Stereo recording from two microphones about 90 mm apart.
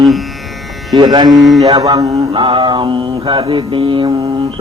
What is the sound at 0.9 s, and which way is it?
Speech, 50° right (ahead or behind).